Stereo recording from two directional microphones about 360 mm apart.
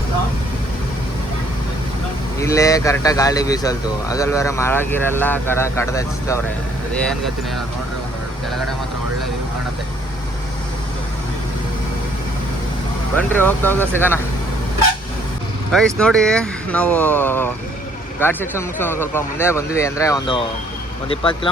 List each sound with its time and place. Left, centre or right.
2.4 s speech: centre
13.1 s speech: centre
15.7 s speech: centre